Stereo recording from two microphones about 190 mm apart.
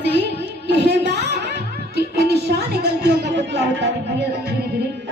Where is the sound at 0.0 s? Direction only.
60° right (ahead or behind).